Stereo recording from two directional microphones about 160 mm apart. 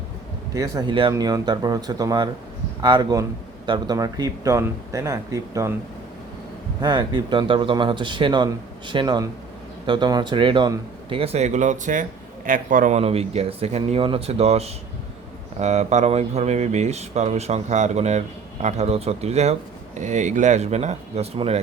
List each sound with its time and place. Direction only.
0.5 s a man's voice: 20° right (ahead or behind)
6.8 s a man's voice: 30° right (ahead or behind); by 13.0 s 55° right (ahead or behind)
13.0 s a man's voice: 40° right (ahead or behind)